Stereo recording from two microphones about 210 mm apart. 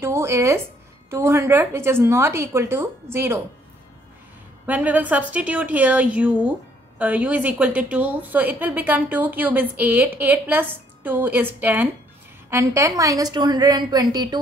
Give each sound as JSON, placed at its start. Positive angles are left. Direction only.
{"t": 0.0, "sound": "a woman's voice", "side_deg": -10}
{"t": 4.6, "sound": "a woman's voice", "side_deg": -5}